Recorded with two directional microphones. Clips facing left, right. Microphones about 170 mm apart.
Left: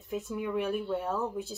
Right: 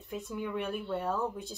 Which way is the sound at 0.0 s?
Centre (ahead or behind).